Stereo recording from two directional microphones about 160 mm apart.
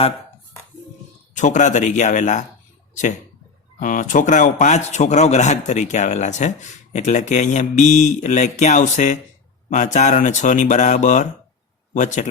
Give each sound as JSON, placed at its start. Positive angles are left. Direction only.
{"t": 1.3, "sound": "a man's voice", "side_deg": 50}